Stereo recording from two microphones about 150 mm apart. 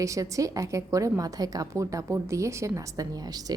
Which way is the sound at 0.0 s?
20° right (ahead or behind).